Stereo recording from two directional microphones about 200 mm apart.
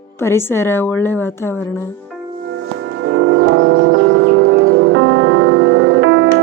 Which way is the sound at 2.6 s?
70° right (ahead or behind).